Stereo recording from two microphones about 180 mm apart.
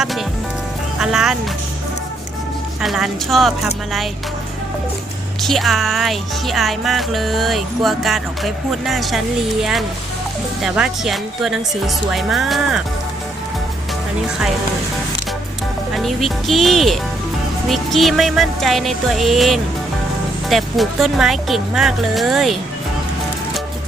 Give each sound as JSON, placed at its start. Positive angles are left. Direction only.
{"t": 0.9, "sound": "speech", "side_deg": -5}
{"t": 2.8, "sound": "speech", "side_deg": 0}
{"t": 5.4, "sound": "speech", "side_deg": 0}
{"t": 15.9, "sound": "speech", "side_deg": 0}